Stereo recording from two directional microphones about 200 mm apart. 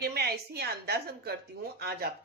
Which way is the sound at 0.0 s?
55° right (ahead or behind).